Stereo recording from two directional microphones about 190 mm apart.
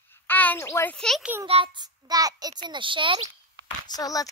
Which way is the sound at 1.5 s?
25° right (ahead or behind).